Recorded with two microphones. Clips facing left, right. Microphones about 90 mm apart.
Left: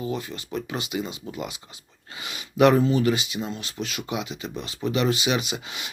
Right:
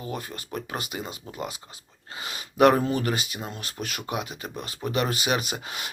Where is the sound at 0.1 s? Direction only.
45° right (ahead or behind).